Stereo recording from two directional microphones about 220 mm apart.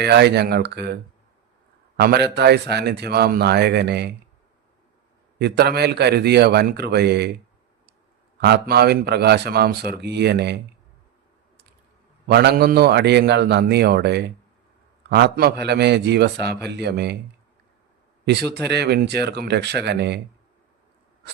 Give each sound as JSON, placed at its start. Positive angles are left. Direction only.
{"t": 0.0, "sound": "speech", "side_deg": -50}
{"t": 2.0, "sound": "speech", "side_deg": -45}
{"t": 5.4, "sound": "speech", "side_deg": -45}
{"t": 8.4, "sound": "speech", "side_deg": -50}
{"t": 12.3, "sound": "speech", "side_deg": -50}
{"t": 18.7, "sound": "speech", "side_deg": -50}